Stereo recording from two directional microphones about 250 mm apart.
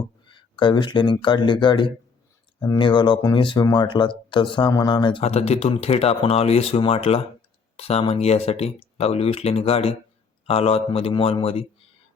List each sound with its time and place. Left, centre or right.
0.3 s speech: centre